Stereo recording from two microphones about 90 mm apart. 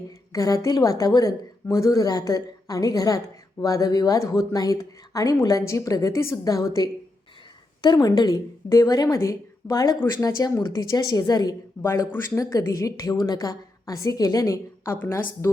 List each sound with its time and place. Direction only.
0.3 s a woman's voice: 40° left (ahead or behind)
11.8 s speech: 30° left (ahead or behind)
14.9 s speech: 20° left (ahead or behind)